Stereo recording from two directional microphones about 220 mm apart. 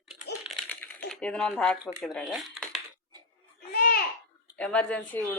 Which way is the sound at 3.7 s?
45° left (ahead or behind).